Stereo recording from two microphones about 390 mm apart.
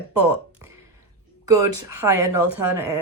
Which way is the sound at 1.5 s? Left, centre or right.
Centre.